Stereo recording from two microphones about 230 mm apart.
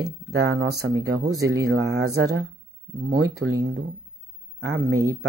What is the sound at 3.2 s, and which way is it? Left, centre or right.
Speech, right.